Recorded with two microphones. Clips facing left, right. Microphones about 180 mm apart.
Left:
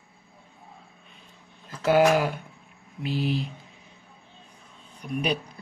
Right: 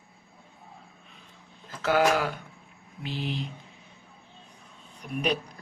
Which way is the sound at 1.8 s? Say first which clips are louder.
Left 4 dB; 15° left (ahead or behind).